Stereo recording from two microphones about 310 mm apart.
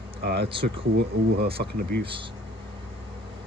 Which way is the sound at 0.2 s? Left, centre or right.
Right.